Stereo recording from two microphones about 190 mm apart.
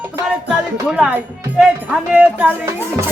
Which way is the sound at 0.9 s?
5° right (ahead or behind).